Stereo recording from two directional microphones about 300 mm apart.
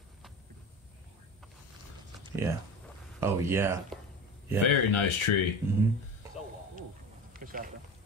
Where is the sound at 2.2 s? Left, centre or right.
Centre.